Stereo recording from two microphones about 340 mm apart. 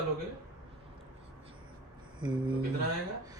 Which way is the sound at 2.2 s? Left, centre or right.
Centre.